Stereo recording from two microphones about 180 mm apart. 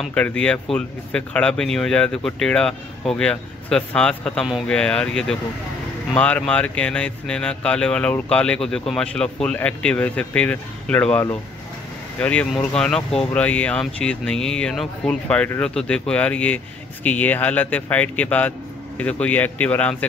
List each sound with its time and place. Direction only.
0.0 s speech: 5° left (ahead or behind)